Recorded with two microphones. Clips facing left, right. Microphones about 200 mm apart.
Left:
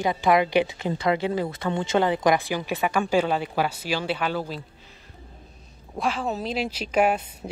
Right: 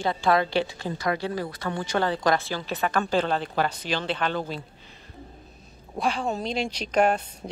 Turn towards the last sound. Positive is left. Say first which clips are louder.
# even
turn(degrees=5)  # may be behind; listen again after turning